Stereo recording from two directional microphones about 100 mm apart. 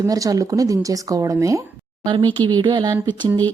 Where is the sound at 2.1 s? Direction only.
50° right (ahead or behind).